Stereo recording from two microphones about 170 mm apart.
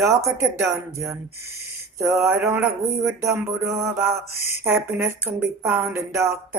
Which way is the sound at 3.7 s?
15° right (ahead or behind).